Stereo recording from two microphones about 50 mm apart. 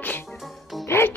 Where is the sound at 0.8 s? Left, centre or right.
Left.